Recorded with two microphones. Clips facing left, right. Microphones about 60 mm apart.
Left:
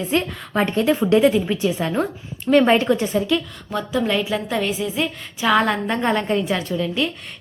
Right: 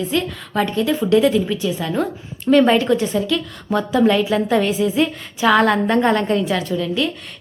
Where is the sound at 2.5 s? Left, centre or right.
Centre.